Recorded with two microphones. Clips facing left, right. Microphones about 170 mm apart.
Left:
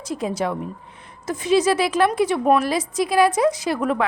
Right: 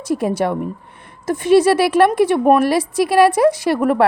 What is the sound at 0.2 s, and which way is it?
A woman's voice, 60° right (ahead or behind).